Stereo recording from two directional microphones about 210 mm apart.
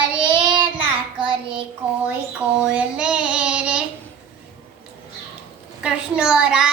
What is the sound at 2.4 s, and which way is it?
Child singing, 5° right (ahead or behind).